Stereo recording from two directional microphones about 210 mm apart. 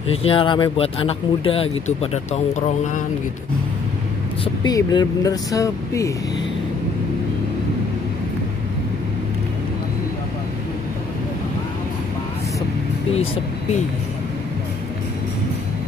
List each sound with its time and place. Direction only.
0.1 s speech: 25° left (ahead or behind)
4.6 s speech: 20° left (ahead or behind)